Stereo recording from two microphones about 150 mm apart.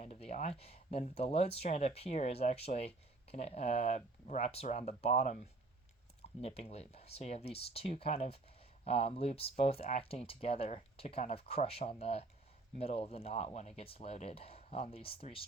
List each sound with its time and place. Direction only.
0.0 s speech: 45° left (ahead or behind)
6.4 s speech: 45° left (ahead or behind)